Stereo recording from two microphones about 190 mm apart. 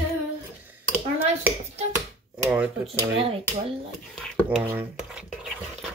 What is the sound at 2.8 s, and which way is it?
Speech, 30° right (ahead or behind).